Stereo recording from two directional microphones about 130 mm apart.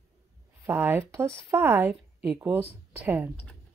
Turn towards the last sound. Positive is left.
turn(degrees=-15)  # may be behind; listen again after turning